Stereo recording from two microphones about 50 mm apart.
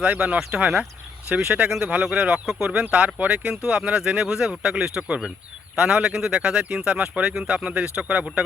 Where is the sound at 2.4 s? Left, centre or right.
Centre.